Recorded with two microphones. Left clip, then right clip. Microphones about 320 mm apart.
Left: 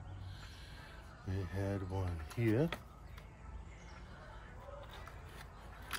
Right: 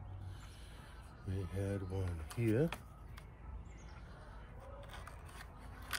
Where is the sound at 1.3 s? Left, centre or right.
Centre.